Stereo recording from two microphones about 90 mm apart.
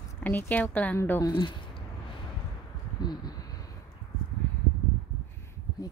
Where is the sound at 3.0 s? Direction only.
55° left (ahead or behind).